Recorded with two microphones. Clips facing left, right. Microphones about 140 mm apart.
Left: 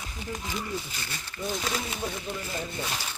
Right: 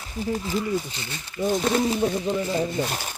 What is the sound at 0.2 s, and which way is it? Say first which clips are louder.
Speech: right 9 dB; 35° right (ahead or behind).